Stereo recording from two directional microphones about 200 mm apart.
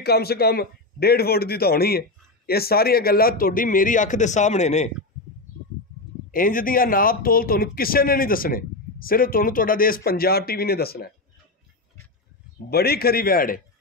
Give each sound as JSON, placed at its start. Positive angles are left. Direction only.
{"t": 0.0, "sound": "a man's voice", "side_deg": 50}
{"t": 6.3, "sound": "a man's voice", "side_deg": 45}
{"t": 12.6, "sound": "a man's voice", "side_deg": 50}